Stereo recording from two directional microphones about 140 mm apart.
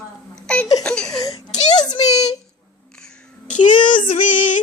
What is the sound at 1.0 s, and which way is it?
Baby cry, 25° left (ahead or behind).